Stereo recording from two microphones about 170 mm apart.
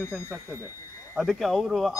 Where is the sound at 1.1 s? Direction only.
Centre (ahead or behind).